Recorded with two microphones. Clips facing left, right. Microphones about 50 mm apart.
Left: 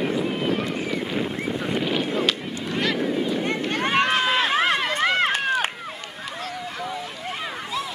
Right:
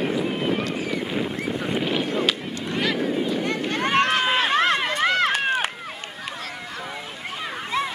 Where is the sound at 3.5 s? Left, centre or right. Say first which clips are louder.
Right 2 dB; centre.